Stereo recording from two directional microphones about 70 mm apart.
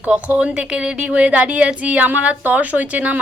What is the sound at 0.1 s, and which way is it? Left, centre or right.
A woman's voice, centre.